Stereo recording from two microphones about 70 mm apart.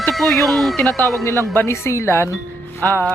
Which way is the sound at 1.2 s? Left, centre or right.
Left.